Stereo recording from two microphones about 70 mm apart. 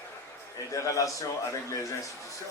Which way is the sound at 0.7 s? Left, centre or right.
Left.